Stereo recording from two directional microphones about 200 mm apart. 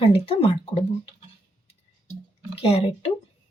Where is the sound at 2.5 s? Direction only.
30° left (ahead or behind).